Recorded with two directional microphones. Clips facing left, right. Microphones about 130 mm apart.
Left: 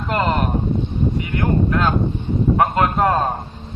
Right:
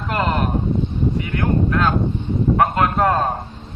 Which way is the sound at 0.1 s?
Centre (ahead or behind).